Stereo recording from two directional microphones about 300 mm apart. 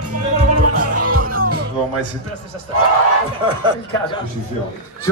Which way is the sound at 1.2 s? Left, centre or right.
Right.